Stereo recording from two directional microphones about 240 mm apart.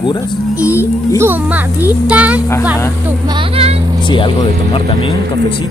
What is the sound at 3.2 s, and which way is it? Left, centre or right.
Speech, centre.